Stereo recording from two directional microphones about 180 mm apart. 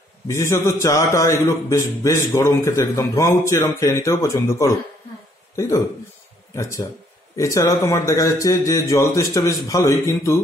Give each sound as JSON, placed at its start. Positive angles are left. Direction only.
{"t": 0.3, "sound": "a man's voice", "side_deg": 15}
{"t": 6.5, "sound": "a man's voice", "side_deg": 15}